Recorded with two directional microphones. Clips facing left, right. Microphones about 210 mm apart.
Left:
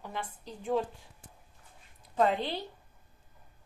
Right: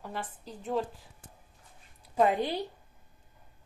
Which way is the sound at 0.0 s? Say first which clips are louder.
Right 1 dB; 5° right (ahead or behind).